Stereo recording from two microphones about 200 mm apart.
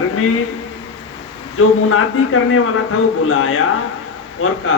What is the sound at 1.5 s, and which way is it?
Speech, 90° left.